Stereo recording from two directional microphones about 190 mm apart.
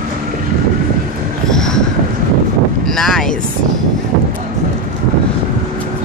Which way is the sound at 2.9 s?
Centre (ahead or behind).